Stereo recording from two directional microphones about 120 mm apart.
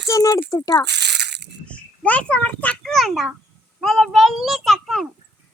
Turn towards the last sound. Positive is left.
turn(degrees=0)  # may be behind; listen again after turning